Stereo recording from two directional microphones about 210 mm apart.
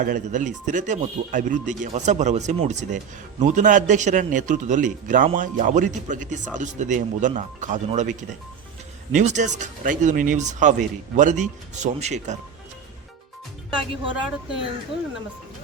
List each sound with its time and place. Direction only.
0.0 s a man's voice: 35° right (ahead or behind)
9.1 s a man's voice: 35° right (ahead or behind)
14.1 s speech: 5° right (ahead or behind)